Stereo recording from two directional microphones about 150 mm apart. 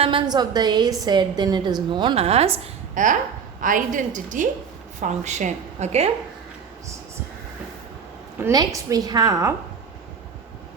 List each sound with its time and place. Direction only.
0.0 s a woman's voice: 35° right (ahead or behind)
3.6 s a woman's voice: 60° right (ahead or behind)
8.4 s a woman's voice: 20° right (ahead or behind)